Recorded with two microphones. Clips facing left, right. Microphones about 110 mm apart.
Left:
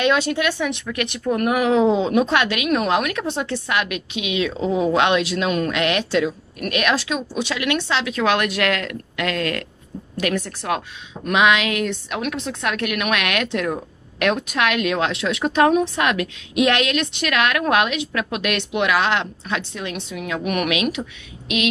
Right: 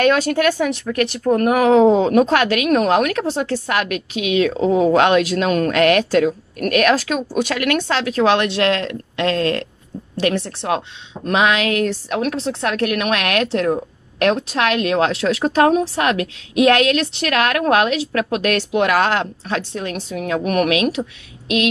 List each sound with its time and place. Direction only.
0.0 s a woman's voice: 45° right (ahead or behind)